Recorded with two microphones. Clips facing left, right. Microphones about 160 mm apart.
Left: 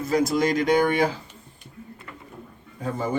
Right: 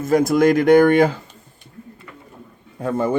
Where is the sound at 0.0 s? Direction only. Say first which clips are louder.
Right 7 dB; 50° right (ahead or behind).